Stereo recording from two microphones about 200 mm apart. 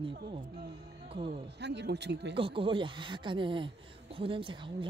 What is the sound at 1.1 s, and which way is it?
Speech, 30° right (ahead or behind).